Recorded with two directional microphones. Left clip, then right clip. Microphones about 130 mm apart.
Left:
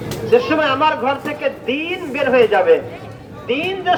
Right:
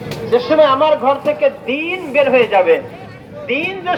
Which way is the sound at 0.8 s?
40° left (ahead or behind).